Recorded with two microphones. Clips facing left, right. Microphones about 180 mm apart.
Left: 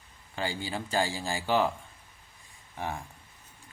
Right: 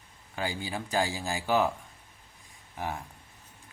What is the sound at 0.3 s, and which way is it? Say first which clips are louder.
Speech: even; 5° right (ahead or behind).